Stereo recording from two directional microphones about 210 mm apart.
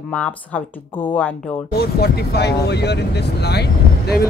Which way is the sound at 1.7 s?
50° left (ahead or behind).